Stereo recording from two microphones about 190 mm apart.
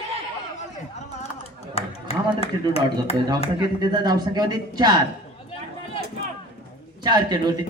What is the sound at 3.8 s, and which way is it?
A man's voice, 20° right (ahead or behind).